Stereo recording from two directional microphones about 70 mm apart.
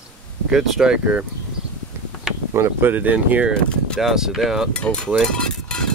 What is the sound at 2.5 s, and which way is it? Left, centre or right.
Speech, right.